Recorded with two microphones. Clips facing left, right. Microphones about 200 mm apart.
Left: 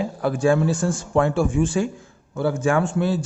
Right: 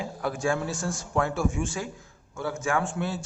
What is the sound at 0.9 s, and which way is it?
A man's voice, 30° left (ahead or behind).